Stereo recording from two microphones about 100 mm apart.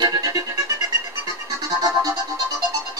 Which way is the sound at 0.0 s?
40° right (ahead or behind).